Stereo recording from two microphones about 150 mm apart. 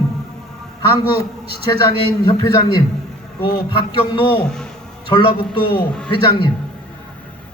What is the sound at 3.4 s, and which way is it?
Speech, 35° left (ahead or behind).